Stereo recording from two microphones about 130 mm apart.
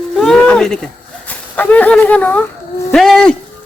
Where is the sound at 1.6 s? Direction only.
10° left (ahead or behind).